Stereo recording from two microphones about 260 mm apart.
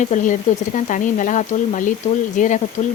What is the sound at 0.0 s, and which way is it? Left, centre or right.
Speech, left.